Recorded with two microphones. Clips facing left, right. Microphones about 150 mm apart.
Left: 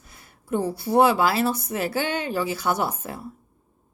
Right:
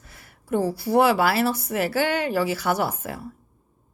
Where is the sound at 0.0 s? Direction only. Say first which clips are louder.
Right 1 dB; 20° left (ahead or behind).